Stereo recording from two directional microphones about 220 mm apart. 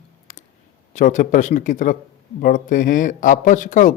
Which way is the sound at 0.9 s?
35° left (ahead or behind).